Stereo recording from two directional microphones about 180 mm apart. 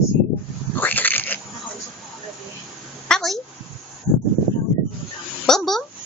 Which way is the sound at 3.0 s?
5° left (ahead or behind).